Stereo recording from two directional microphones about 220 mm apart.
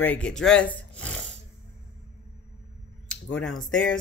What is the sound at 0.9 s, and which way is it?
Snoring, 5° left (ahead or behind).